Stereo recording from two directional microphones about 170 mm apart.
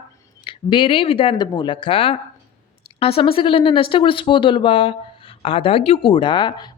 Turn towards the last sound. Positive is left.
turn(degrees=25)  # may be behind; listen again after turning